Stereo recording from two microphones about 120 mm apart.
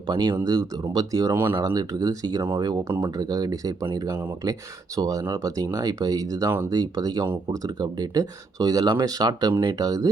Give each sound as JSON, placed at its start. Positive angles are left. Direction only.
{"t": 0.1, "sound": "speech", "side_deg": -35}
{"t": 1.5, "sound": "speech", "side_deg": -30}